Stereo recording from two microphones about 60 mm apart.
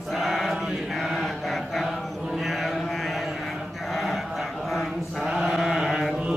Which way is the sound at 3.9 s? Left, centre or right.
Centre.